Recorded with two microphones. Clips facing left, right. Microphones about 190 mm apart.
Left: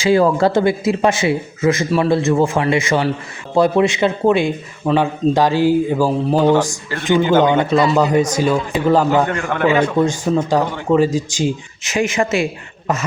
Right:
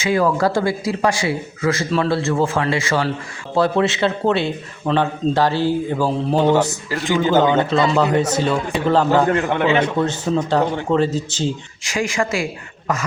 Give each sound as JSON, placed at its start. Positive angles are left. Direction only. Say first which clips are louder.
{"t": 0.0, "sound": "a man's voice", "louder": "left 4 dB", "side_deg": 30}
{"t": 6.6, "sound": "speech", "louder": "even", "side_deg": -5}
{"t": 7.0, "sound": "speech", "louder": "left 3 dB", "side_deg": 20}
{"t": 9.2, "sound": "a man's voice", "louder": "even", "side_deg": -20}
{"t": 10.0, "sound": "speech", "louder": "left 3 dB", "side_deg": 10}
{"t": 11.9, "sound": "a man's voice", "louder": "left 4 dB", "side_deg": 20}